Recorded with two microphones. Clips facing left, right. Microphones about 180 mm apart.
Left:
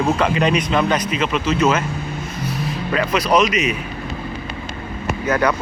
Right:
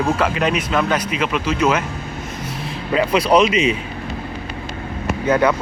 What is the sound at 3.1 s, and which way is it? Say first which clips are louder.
Speech: right 2 dB; 30° right (ahead or behind).